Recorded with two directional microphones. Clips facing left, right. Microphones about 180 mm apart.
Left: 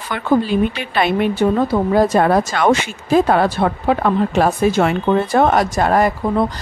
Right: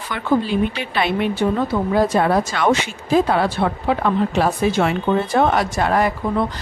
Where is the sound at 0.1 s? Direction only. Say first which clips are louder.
Left 3 dB; 50° left (ahead or behind).